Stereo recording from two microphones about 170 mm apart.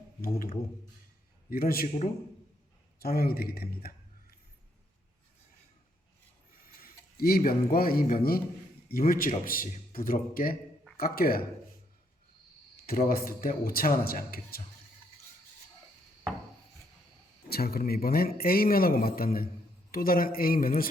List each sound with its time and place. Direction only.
0.2 s a man's voice: 55° left (ahead or behind)
6.7 s a man's voice: 60° left (ahead or behind)
12.7 s a man's voice: 60° left (ahead or behind)
17.5 s a man's voice: 65° left (ahead or behind)